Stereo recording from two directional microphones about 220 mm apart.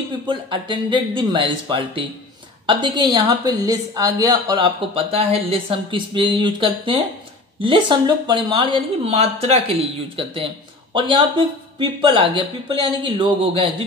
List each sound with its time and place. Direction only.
0.3 s speech: 20° right (ahead or behind)